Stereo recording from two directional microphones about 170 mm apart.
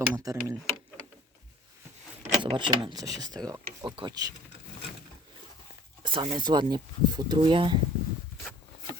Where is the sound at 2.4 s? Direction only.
30° right (ahead or behind).